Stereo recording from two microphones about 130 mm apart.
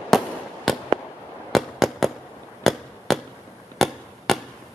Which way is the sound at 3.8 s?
Centre (ahead or behind).